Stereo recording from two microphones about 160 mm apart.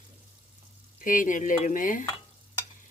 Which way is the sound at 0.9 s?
55° left (ahead or behind).